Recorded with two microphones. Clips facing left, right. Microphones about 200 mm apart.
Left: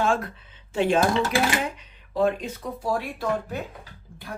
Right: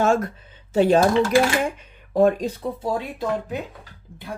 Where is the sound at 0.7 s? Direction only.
40° right (ahead or behind).